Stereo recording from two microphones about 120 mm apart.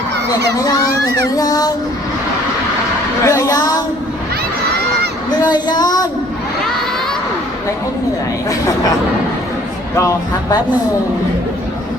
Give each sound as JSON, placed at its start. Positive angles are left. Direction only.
{"t": 0.6, "sound": "speech", "side_deg": 30}
{"t": 3.2, "sound": "speech", "side_deg": 25}
{"t": 5.3, "sound": "speech", "side_deg": 35}
{"t": 9.9, "sound": "speech", "side_deg": 25}